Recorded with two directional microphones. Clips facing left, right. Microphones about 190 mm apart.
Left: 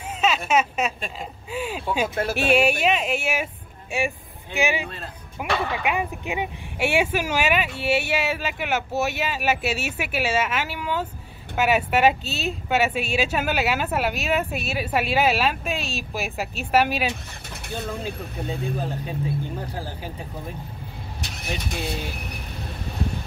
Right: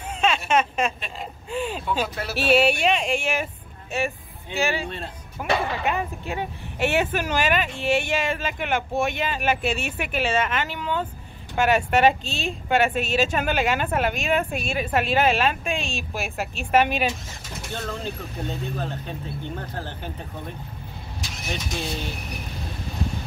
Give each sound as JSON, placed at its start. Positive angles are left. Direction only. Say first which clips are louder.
{"t": 0.5, "sound": "speech", "louder": "even", "side_deg": 5}
{"t": 2.1, "sound": "speech", "louder": "left 3 dB", "side_deg": 50}
{"t": 2.5, "sound": "speech", "louder": "right 1 dB", "side_deg": 10}
{"t": 17.1, "sound": "mechanisms", "louder": "even", "side_deg": 60}
{"t": 17.7, "sound": "speech", "louder": "left 1 dB", "side_deg": 10}
{"t": 21.2, "sound": "vehicle", "louder": "even", "side_deg": 60}